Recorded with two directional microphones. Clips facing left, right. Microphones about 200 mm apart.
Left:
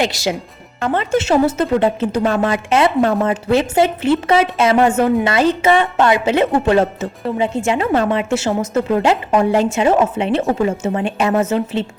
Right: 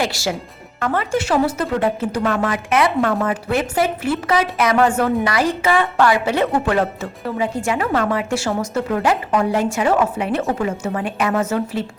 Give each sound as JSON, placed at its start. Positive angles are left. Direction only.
{"t": 0.0, "sound": "speech", "side_deg": 20}